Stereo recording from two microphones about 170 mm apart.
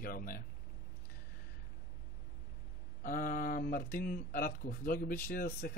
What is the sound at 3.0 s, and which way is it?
Speech, 55° left (ahead or behind).